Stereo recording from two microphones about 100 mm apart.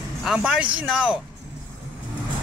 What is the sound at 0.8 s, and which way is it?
Speech, 10° right (ahead or behind).